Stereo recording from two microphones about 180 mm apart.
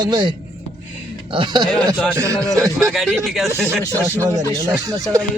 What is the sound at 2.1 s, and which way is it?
Speech, 15° right (ahead or behind).